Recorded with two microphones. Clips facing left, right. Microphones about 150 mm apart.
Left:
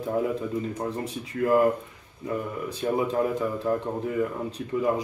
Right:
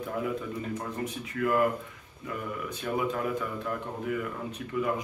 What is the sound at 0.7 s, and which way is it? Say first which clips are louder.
Speech: left 4 dB; 30° left (ahead or behind).